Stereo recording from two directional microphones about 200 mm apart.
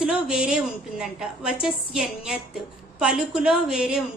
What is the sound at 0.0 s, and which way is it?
A woman's voice, 5° right (ahead or behind).